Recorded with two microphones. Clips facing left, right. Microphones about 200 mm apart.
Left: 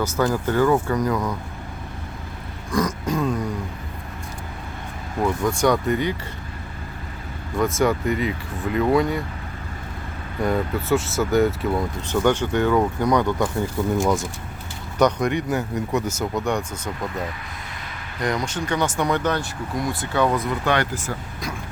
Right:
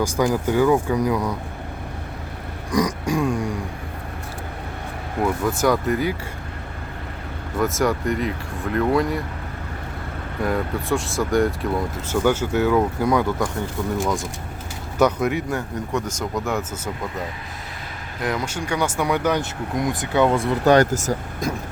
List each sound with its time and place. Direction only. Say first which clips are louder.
0.0 s speech: right 1 dB; 10° right (ahead or behind)
2.7 s speech: right 2 dB; 15° right (ahead or behind)
5.2 s speech: even; 5° right (ahead or behind)
7.6 s speech: left 1 dB; centre (ahead or behind)
10.4 s speech: left 1 dB; centre (ahead or behind)
18.2 s speech: left 1 dB; 5° right (ahead or behind); by 21.5 s 45° right (ahead or behind)